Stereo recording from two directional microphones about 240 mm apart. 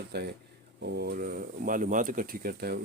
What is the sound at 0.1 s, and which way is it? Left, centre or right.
Speech, right.